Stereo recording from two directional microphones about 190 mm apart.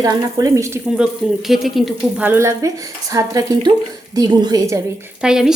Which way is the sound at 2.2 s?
15° right (ahead or behind).